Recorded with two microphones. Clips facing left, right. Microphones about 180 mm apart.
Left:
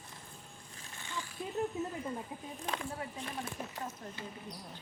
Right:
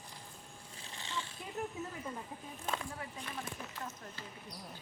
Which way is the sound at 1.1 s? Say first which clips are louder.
Even; 25° right (ahead or behind).